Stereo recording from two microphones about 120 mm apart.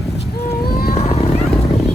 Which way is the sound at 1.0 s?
60° left (ahead or behind).